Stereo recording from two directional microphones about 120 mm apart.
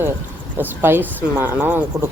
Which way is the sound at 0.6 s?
20° right (ahead or behind).